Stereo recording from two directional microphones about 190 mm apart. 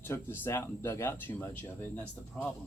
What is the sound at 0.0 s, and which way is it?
Speech, 10° left (ahead or behind).